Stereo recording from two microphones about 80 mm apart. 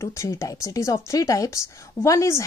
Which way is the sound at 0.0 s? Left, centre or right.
Left.